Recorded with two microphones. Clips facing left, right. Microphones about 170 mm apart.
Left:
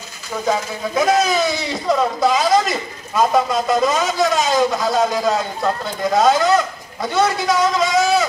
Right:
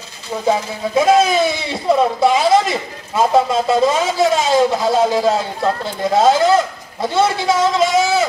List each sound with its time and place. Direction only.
0.5 s speech: 25° right (ahead or behind)